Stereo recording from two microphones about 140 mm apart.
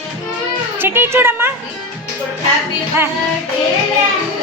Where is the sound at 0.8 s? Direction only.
15° right (ahead or behind).